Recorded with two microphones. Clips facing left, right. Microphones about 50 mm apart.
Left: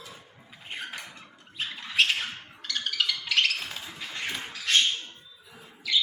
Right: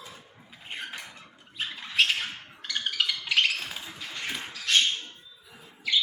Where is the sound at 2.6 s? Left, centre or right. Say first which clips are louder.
Even; centre.